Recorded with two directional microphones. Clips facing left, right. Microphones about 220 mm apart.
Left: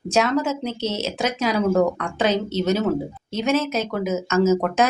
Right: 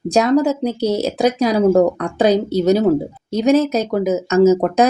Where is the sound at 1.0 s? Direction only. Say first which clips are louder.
Right 6 dB; 35° right (ahead or behind).